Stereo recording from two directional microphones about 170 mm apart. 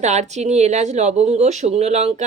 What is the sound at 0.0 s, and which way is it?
Speech, 40° right (ahead or behind).